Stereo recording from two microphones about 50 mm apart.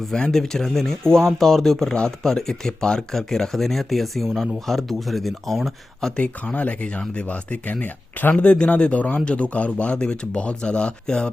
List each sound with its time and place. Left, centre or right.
0.1 s speech: centre
6.1 s speech: left
8.4 s speech: left